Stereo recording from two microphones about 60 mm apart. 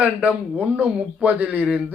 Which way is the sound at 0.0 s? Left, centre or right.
Right.